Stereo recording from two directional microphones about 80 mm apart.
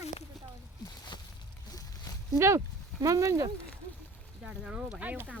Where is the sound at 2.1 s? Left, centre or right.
Left.